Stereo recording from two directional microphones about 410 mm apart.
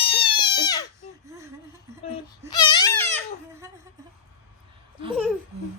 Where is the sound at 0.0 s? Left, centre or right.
Centre.